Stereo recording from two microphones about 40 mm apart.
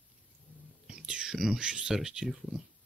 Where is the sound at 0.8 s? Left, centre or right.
Right.